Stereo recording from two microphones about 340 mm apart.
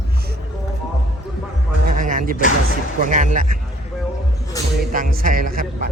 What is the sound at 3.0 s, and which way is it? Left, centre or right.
Speech, right.